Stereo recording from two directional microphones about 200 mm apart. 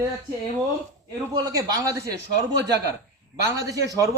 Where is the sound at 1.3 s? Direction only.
20° right (ahead or behind).